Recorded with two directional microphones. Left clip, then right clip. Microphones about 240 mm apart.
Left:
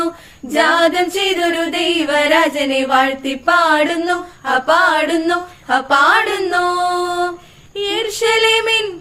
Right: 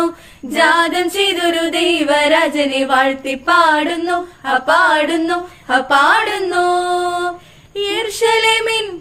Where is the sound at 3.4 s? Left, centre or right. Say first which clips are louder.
Right 1 dB; centre.